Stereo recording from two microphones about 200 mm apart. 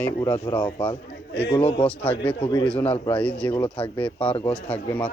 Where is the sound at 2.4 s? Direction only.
20° left (ahead or behind).